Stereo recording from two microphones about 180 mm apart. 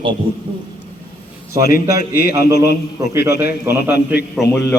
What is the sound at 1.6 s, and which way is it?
Speech, 55° left (ahead or behind).